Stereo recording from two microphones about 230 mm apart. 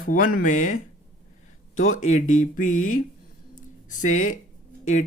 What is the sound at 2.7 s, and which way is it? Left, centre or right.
Speech, left.